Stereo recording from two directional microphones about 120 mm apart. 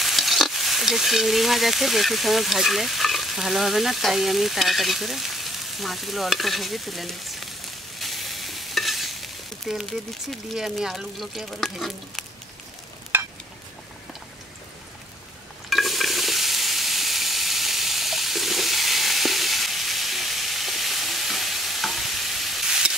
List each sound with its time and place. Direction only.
0.0 s stir: centre (ahead or behind)
13.1 s stir: 20° right (ahead or behind)
15.7 s sizzle: centre (ahead or behind)